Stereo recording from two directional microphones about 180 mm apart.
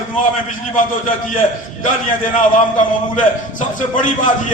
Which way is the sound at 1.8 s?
45° left (ahead or behind).